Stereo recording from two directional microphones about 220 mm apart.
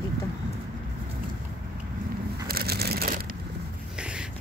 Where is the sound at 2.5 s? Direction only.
45° right (ahead or behind).